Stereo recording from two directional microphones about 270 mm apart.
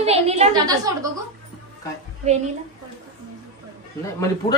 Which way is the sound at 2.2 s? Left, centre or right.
Right.